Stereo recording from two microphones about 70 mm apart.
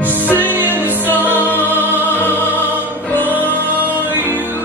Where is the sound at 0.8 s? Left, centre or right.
Right.